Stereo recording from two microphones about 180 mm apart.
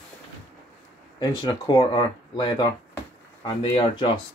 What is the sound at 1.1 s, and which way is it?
Speech, 25° left (ahead or behind).